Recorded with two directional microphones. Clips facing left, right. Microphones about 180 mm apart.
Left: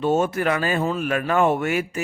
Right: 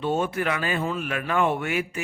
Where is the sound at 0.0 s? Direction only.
45° left (ahead or behind).